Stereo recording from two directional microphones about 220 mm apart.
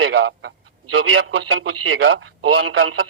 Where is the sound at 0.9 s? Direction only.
65° right (ahead or behind).